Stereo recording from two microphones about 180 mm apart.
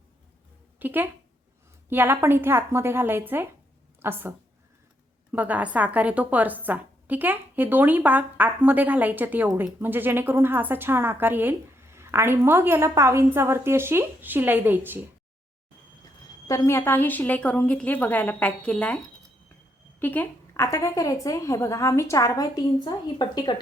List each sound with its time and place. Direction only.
0.8 s a woman's voice: 10° right (ahead or behind)
16.5 s a woman's voice: 15° left (ahead or behind)
20.0 s a woman's voice: 10° left (ahead or behind)